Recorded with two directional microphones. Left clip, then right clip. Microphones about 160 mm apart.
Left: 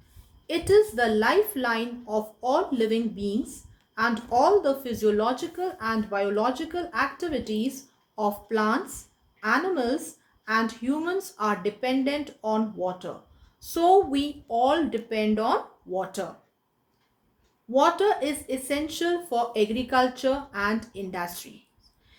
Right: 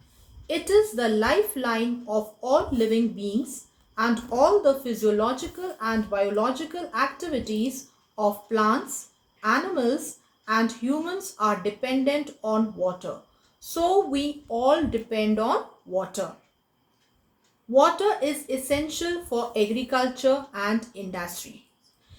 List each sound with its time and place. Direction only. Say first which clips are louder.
0.4 s speech: left 1 dB; 50° left (ahead or behind)
14.1 s speech: even; 50° left (ahead or behind)
17.7 s speech: right 2 dB; 50° left (ahead or behind)